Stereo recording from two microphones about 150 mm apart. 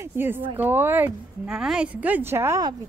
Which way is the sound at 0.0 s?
15° right (ahead or behind).